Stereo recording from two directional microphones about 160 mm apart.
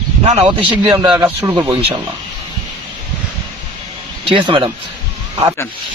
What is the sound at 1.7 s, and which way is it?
Speech, 35° right (ahead or behind).